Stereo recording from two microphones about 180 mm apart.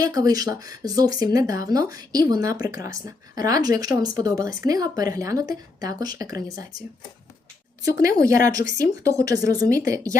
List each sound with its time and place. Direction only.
0.0 s speech: 20° right (ahead or behind)
8.1 s speech: 50° left (ahead or behind)
8.8 s speech: 20° right (ahead or behind)